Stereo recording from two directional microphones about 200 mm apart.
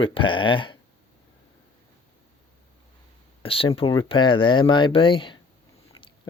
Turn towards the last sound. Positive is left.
turn(degrees=25)  # may be behind; listen again after turning